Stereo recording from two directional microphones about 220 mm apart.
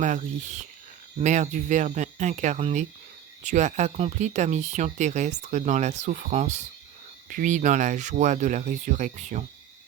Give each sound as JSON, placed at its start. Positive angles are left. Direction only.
{"t": 0.0, "sound": "speech", "side_deg": -35}